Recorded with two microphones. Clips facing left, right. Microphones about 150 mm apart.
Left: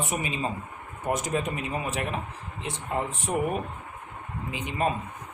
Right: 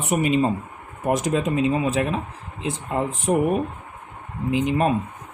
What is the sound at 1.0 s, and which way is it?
Speech, 90° right.